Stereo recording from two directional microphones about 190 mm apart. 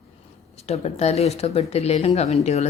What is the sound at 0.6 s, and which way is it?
Speech, 35° left (ahead or behind).